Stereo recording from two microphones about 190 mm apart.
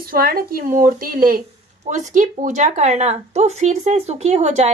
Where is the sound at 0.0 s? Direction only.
50° right (ahead or behind).